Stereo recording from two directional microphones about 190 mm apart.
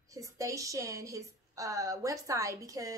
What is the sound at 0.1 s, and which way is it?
A woman's voice, 15° right (ahead or behind).